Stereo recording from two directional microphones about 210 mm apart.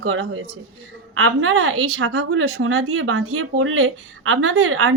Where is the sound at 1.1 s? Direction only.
75° right (ahead or behind).